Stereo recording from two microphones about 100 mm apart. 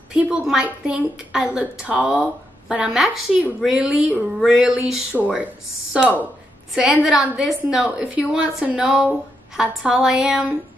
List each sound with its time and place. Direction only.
0.1 s a woman's voice: 10° right (ahead or behind)
3.6 s a sound: 5° right (ahead or behind)
5.1 s a woman's voice: 15° right (ahead or behind)